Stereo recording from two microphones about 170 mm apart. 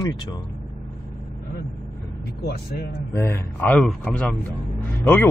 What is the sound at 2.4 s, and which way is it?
Speech, 70° left (ahead or behind).